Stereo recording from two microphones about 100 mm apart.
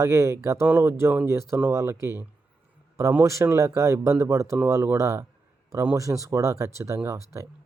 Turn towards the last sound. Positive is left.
turn(degrees=-30)  # may be behind; listen again after turning